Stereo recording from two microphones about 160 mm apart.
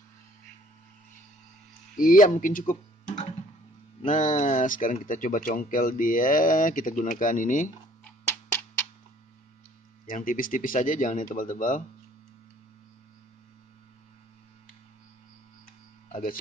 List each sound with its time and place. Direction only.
2.0 s speech: 60° left (ahead or behind)
8.0 s a sound: 15° left (ahead or behind)
10.0 s speech: 60° left (ahead or behind)